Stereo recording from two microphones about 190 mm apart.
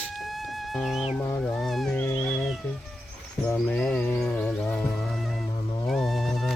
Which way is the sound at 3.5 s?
5° left (ahead or behind).